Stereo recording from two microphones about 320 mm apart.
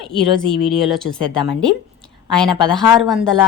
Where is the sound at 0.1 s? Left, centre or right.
Centre.